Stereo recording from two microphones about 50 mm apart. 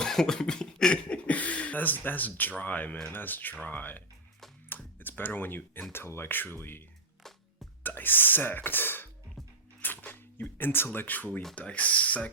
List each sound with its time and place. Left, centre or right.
0.0 s a sound: centre
1.3 s speech: left
7.2 s music: centre
7.9 s speech: left
11.5 s speech: left